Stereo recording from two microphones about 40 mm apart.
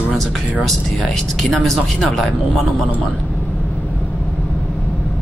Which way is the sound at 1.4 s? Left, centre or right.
Centre.